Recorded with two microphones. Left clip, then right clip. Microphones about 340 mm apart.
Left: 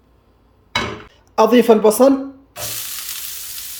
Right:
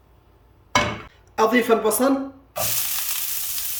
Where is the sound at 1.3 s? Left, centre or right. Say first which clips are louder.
Left 6 dB; centre.